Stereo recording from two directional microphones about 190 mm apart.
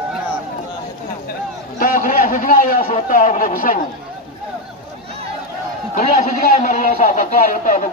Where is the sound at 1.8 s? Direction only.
50° left (ahead or behind).